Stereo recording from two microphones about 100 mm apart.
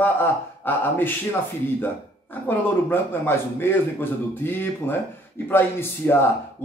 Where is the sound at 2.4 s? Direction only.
20° left (ahead or behind).